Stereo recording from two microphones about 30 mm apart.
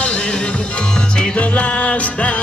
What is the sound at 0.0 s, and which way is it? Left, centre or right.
Music, left.